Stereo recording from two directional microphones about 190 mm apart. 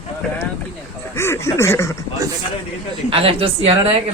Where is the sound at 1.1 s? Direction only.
15° left (ahead or behind).